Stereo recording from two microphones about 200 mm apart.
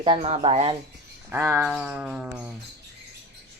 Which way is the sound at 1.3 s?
15° right (ahead or behind).